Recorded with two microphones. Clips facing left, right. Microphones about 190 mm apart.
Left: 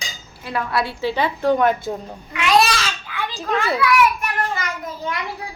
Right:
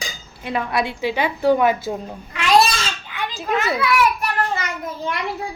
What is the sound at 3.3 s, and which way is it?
Speech, 5° right (ahead or behind).